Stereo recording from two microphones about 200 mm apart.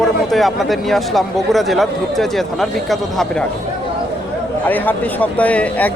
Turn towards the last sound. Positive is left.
turn(degrees=5)  # may be behind; listen again after turning